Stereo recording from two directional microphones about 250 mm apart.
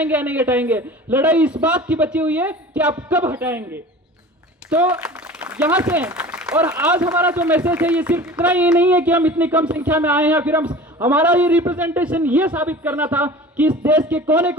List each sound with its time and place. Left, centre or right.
0.0 s speech: centre
10.7 s a man's voice: centre
11.1 s speech: centre